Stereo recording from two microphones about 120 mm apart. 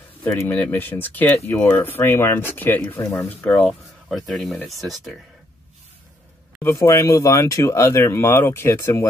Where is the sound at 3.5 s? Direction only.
10° left (ahead or behind).